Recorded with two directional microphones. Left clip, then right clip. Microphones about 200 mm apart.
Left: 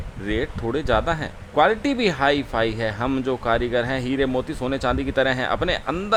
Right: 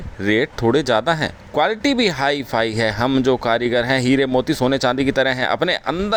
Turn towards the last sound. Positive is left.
turn(degrees=-20)  # may be behind; listen again after turning